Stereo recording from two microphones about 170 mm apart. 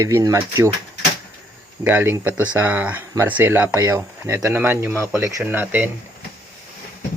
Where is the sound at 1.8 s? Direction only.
10° right (ahead or behind).